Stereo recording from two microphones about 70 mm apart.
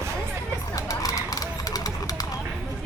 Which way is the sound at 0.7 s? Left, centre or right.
Left.